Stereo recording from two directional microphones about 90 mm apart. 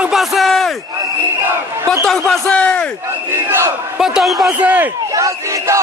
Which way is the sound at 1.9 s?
5° left (ahead or behind).